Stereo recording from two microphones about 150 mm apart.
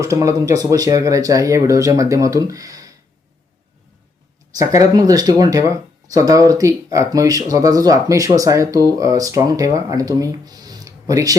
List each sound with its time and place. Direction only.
0.0 s speech: 20° right (ahead or behind)
4.5 s speech: 20° right (ahead or behind)